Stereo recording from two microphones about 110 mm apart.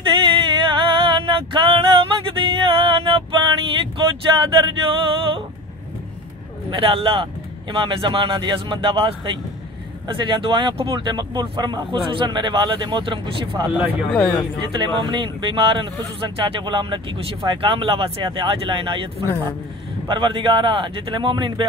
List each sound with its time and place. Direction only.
0.0 s a sound: 50° right (ahead or behind)
4.4 s speech: 45° right (ahead or behind)
6.7 s speech: 55° right (ahead or behind)
14.1 s speech: centre (ahead or behind)
14.8 s speech: 45° right (ahead or behind)
20.1 s speech: 45° right (ahead or behind)